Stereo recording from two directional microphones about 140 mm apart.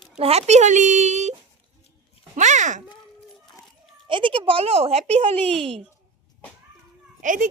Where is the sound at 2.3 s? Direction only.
60° right (ahead or behind).